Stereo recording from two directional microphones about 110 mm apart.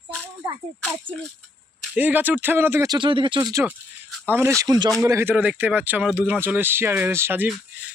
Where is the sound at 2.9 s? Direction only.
50° right (ahead or behind).